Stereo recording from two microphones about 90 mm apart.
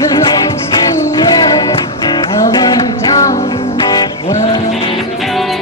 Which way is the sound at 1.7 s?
65° left (ahead or behind).